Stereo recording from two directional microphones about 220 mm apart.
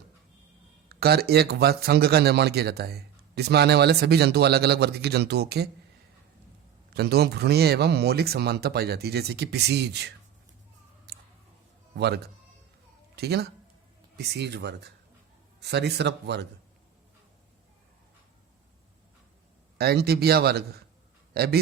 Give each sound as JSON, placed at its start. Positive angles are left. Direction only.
{"t": 0.9, "sound": "speech", "side_deg": -45}
{"t": 6.9, "sound": "speech", "side_deg": -45}
{"t": 11.1, "sound": "a sound", "side_deg": -50}
{"t": 11.9, "sound": "speech", "side_deg": -50}
{"t": 19.8, "sound": "a man's voice", "side_deg": -45}